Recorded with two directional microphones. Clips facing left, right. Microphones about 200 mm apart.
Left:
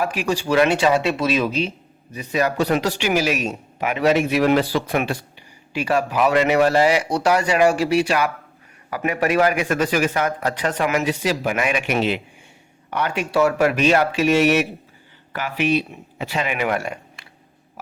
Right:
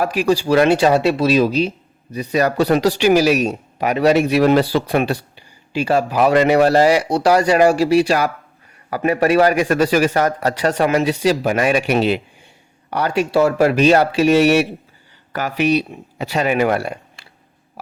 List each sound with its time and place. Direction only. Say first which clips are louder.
0.0 s a man's voice: right 5 dB; 40° right (ahead or behind)